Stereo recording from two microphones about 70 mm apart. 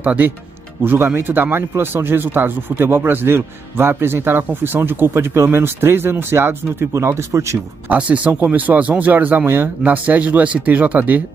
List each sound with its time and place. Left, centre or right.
0.0 s speech: right
0.8 s speech: right
7.9 s speech: right